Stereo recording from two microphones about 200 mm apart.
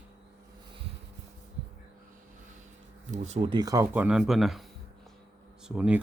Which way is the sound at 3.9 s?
5° right (ahead or behind).